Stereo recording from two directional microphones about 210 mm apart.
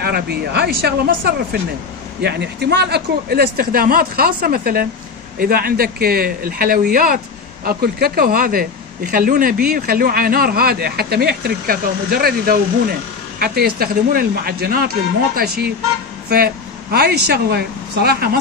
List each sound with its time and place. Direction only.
0.0 s a man's voice: 50° right (ahead or behind)